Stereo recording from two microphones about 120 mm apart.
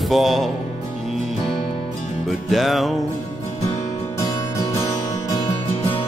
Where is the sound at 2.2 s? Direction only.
Centre (ahead or behind).